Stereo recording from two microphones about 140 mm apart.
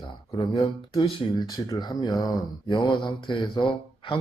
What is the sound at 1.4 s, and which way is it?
Speech, 25° left (ahead or behind).